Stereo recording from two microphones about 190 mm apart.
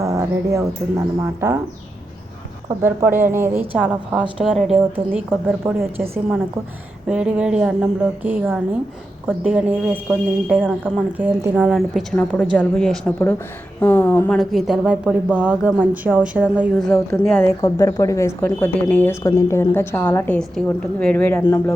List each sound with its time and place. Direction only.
0.0 s speech: 20° right (ahead or behind)
2.8 s a woman's voice: 10° right (ahead or behind); by 14.3 s 10° left (ahead or behind)
14.3 s speech: centre (ahead or behind)
17.2 s speech: 10° left (ahead or behind)